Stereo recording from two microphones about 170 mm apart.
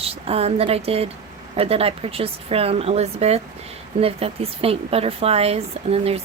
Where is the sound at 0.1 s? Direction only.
35° right (ahead or behind).